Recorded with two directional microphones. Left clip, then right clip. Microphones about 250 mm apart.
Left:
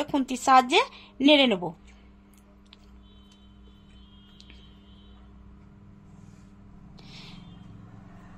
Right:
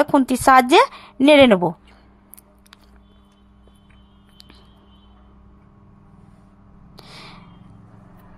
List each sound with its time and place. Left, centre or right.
0.1 s speech: right
7.0 s gasp: right